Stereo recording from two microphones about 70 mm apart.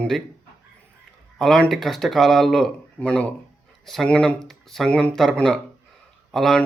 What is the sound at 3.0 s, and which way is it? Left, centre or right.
Speech, centre.